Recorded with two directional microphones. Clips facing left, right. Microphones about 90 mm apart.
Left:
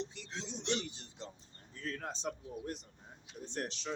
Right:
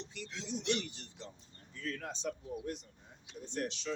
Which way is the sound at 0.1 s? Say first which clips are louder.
Right 3 dB; 30° left (ahead or behind).